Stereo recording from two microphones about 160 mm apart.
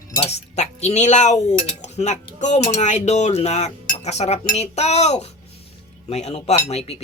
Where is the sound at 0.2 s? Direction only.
40° left (ahead or behind).